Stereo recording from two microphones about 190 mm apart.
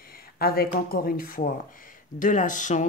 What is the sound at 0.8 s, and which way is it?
Speech, 50° left (ahead or behind).